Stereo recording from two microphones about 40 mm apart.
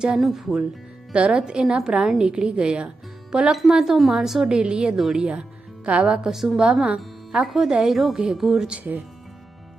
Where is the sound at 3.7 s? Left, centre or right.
Centre.